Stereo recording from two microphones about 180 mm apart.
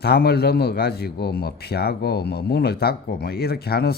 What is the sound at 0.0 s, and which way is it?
A man's voice, 65° left (ahead or behind).